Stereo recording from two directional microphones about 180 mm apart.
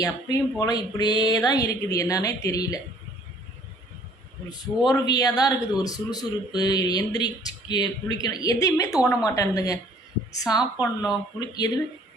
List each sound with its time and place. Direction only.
0.0 s a man's voice: 20° left (ahead or behind)
4.4 s a man's voice: 20° left (ahead or behind)